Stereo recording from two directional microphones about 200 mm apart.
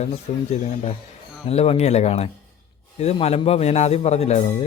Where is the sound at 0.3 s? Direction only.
35° left (ahead or behind).